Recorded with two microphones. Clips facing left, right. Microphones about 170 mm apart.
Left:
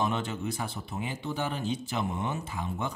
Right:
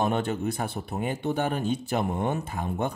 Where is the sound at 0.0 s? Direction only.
55° right (ahead or behind).